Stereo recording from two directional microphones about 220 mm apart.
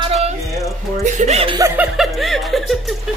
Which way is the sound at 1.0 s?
30° right (ahead or behind).